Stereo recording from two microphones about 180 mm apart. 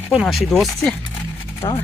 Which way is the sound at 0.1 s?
Centre (ahead or behind).